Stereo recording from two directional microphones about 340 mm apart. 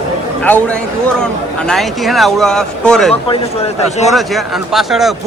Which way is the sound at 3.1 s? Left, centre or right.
Centre.